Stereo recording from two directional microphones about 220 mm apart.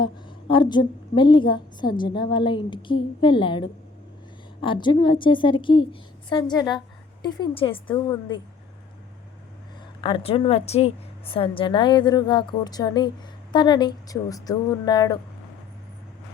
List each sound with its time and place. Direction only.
0.0 s a woman's voice: 20° left (ahead or behind)
10.0 s a woman's voice: 25° left (ahead or behind)